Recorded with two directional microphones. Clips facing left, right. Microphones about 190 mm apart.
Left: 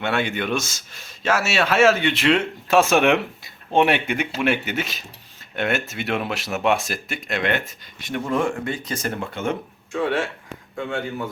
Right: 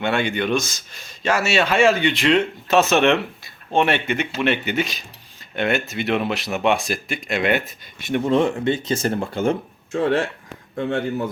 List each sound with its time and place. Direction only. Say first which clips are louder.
0.0 s a man's voice: right 2 dB; 5° left (ahead or behind)
8.1 s speech: right 4 dB; 25° right (ahead or behind)